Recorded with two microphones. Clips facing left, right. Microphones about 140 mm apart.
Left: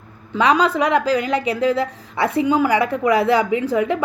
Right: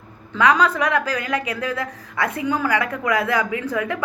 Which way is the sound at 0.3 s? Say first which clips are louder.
Left 2 dB; 20° left (ahead or behind).